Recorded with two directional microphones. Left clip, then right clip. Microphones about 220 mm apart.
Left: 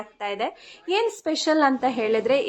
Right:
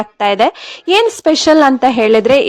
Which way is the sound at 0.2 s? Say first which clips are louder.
Right 16 dB; 45° right (ahead or behind).